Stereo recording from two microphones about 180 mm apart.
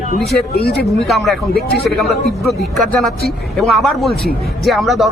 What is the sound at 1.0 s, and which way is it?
A man's voice, centre (ahead or behind).